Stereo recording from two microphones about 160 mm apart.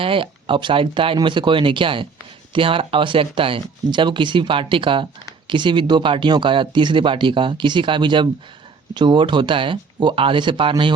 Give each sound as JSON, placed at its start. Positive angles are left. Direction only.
{"t": 0.0, "sound": "speech", "side_deg": -35}